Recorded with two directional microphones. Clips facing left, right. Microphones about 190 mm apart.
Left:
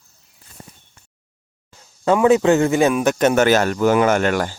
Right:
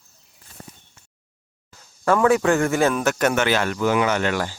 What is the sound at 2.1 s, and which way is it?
A man's voice, 20° left (ahead or behind).